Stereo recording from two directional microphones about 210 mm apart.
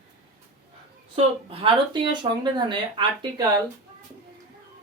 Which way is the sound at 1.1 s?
25° right (ahead or behind).